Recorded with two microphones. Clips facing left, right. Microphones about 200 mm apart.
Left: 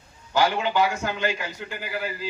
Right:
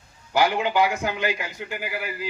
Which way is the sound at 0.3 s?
15° right (ahead or behind).